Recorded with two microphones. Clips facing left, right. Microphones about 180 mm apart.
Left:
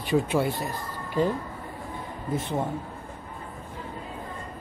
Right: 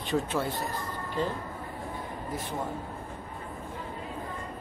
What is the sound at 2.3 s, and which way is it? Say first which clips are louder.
Speech: left 8 dB; 25° left (ahead or behind).